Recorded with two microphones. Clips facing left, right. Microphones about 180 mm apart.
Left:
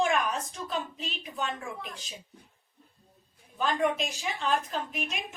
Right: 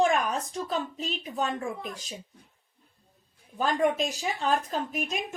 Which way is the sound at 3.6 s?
40° right (ahead or behind).